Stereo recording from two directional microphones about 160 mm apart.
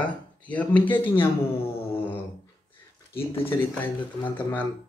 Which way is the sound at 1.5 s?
35° left (ahead or behind).